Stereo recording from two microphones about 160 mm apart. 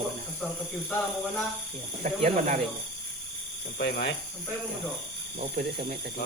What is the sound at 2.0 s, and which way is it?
Speech, 55° right (ahead or behind).